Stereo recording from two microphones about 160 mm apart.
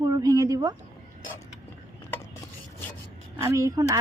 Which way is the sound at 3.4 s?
20° right (ahead or behind).